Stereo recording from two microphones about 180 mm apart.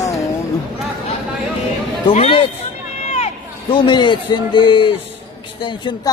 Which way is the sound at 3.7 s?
25° left (ahead or behind).